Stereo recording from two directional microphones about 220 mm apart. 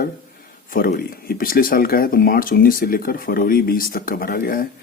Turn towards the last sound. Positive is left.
turn(degrees=40)  # may be behind; listen again after turning